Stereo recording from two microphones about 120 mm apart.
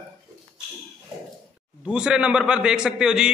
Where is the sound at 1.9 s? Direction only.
5° right (ahead or behind).